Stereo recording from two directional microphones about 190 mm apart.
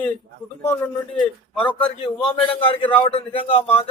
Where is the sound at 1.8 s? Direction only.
25° left (ahead or behind).